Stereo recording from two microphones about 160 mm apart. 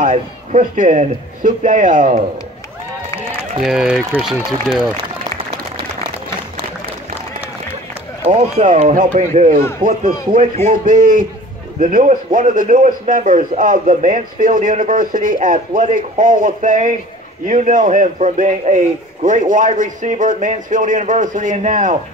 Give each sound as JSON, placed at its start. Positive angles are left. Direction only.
{"t": 0.0, "sound": "speech", "side_deg": -50}
{"t": 3.6, "sound": "speech", "side_deg": -5}
{"t": 8.3, "sound": "a man's voice", "side_deg": -50}